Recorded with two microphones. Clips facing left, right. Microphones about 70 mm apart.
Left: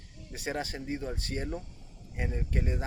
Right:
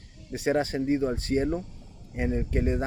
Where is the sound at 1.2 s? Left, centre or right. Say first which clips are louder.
Right 10 dB; right.